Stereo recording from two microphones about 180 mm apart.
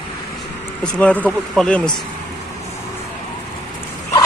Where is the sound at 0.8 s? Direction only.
5° left (ahead or behind).